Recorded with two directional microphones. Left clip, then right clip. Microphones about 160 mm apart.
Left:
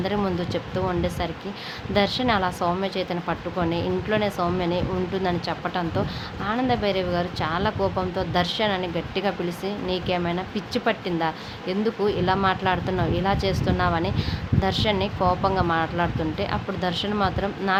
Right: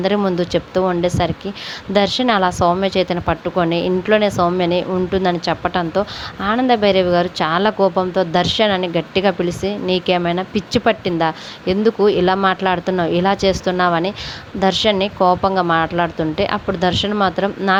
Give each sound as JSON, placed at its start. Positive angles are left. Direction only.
{"t": 0.2, "sound": "a woman's voice", "side_deg": -40}